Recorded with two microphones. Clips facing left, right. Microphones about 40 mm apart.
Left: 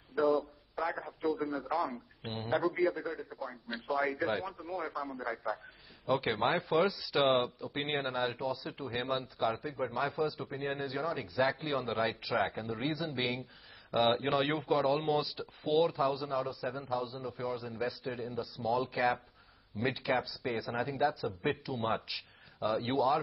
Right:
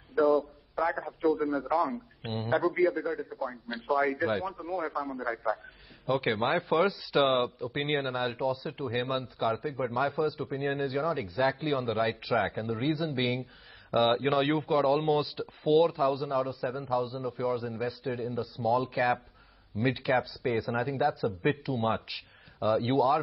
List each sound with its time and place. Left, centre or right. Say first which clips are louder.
0.1 s a sound: right 5 dB; centre
0.7 s a man's voice: right 6 dB; centre
6.9 s a man's voice: right 3 dB; centre
7.2 s a man's voice: right 3 dB; centre